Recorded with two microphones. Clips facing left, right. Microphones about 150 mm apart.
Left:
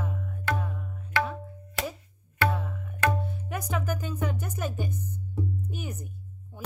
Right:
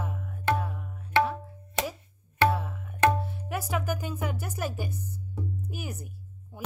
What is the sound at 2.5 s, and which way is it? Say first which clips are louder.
Tabla: right 2 dB; centre (ahead or behind).